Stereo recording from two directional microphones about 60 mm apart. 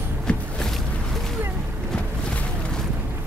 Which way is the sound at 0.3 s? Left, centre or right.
Centre.